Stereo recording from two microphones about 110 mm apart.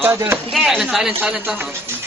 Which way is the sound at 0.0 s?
20° right (ahead or behind).